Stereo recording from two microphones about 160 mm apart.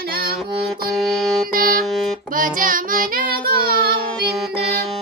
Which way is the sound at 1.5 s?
65° right (ahead or behind).